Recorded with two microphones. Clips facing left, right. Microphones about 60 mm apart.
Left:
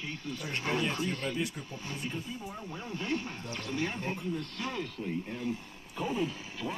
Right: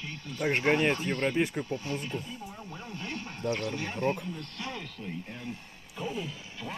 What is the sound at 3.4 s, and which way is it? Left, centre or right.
Speech, right.